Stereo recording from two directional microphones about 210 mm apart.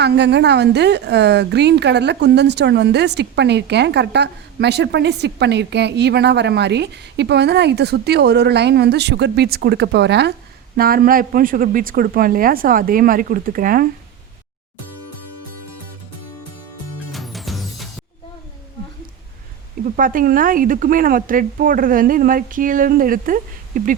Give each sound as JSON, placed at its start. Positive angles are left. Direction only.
{"t": 0.0, "sound": "a woman's voice", "side_deg": -55}
{"t": 17.1, "sound": "music", "side_deg": 0}
{"t": 20.0, "sound": "a woman's voice", "side_deg": -40}